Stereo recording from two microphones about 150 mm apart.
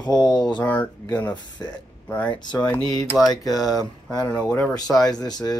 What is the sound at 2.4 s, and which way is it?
Speech, 30° left (ahead or behind).